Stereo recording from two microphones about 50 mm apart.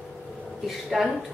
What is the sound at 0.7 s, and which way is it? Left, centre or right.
Speech, centre.